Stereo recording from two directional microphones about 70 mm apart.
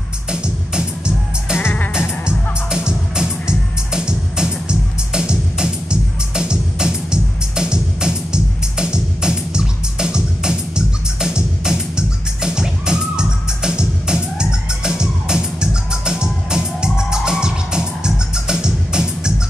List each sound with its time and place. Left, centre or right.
0.3 s music: centre
1.6 s music: left
2.2 s music: centre